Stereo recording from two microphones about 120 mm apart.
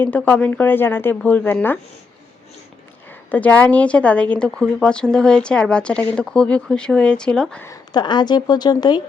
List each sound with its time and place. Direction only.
0.0 s speech: 15° left (ahead or behind)
3.3 s speech: 10° left (ahead or behind)
7.9 s speech: 40° left (ahead or behind)